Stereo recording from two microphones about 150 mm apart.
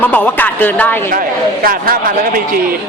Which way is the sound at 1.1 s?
70° right (ahead or behind).